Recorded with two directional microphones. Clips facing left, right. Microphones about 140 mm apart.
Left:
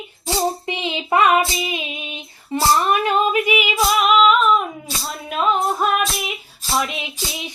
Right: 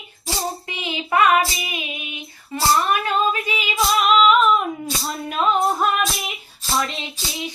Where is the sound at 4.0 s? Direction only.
Centre (ahead or behind).